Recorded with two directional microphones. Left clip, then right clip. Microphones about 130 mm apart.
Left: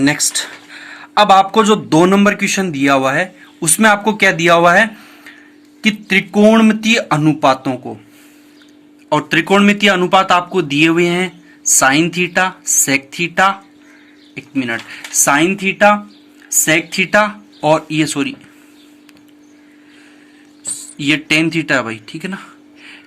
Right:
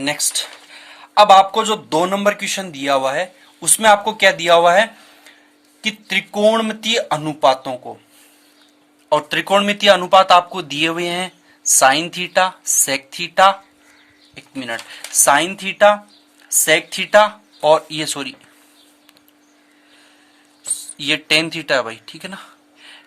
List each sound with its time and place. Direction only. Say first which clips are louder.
0.0 s speech: left 5 dB; 20° right (ahead or behind); by 7.8 s 40° right (ahead or behind)
9.0 s speech: left 3 dB; 55° right (ahead or behind)
17.9 s speech: left 7 dB; 55° right (ahead or behind)
20.7 s speech: left 4 dB; 55° right (ahead or behind)
22.0 s a sound: left 5 dB; 50° right (ahead or behind)